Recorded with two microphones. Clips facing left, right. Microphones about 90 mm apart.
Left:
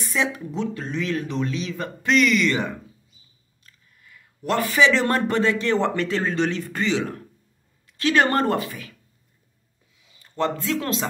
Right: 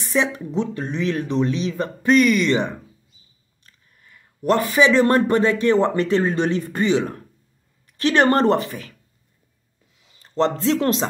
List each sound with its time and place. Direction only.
0.1 s speech: 30° right (ahead or behind)
4.0 s a sound: 35° right (ahead or behind)
4.7 s speech: 20° right (ahead or behind)
10.2 s speech: 30° right (ahead or behind)